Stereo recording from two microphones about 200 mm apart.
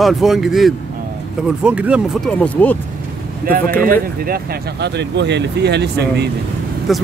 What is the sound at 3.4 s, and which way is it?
Speech, 45° right (ahead or behind).